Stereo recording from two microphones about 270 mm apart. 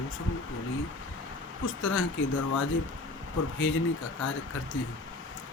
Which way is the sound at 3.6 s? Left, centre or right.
Left.